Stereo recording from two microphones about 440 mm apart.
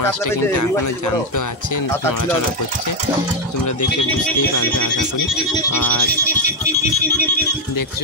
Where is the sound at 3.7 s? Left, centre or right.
Left.